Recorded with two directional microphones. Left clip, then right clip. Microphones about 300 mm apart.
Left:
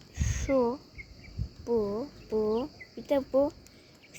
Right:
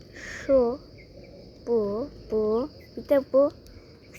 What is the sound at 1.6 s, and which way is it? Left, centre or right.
Speech, centre.